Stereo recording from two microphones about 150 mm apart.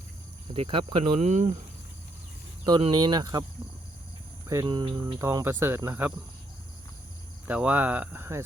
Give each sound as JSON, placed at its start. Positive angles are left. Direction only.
{"t": 0.5, "sound": "speech", "side_deg": -40}
{"t": 2.6, "sound": "speech", "side_deg": -30}
{"t": 4.4, "sound": "speech", "side_deg": -25}
{"t": 7.4, "sound": "speech", "side_deg": -10}